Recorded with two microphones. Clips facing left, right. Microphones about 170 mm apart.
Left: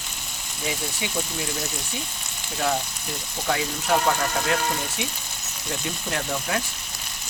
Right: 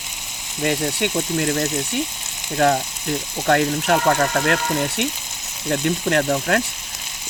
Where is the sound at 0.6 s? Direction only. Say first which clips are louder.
Right 9 dB; 70° right (ahead or behind).